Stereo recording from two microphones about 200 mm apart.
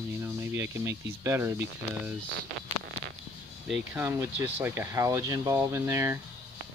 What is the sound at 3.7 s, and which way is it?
Speech, 10° right (ahead or behind).